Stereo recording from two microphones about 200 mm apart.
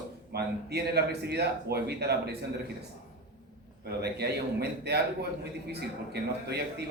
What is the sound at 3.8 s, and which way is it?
Speech, 55° right (ahead or behind).